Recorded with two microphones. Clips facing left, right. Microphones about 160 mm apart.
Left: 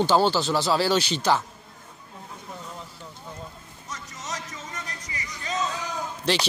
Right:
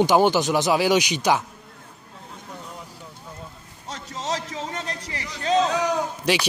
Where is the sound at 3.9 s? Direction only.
70° right (ahead or behind).